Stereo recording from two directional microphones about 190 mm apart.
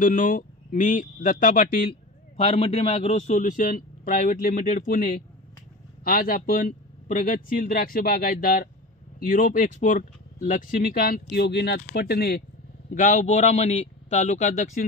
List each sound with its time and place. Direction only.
0.0 s speech: 45° left (ahead or behind)
2.3 s speech: 30° left (ahead or behind); by 12.4 s 55° left (ahead or behind)
12.9 s a man's voice: 40° left (ahead or behind)